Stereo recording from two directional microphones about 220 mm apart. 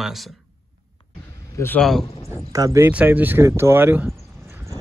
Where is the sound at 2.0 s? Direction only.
25° left (ahead or behind).